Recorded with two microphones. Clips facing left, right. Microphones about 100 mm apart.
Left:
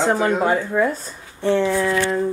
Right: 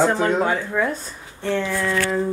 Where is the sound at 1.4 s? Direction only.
20° left (ahead or behind).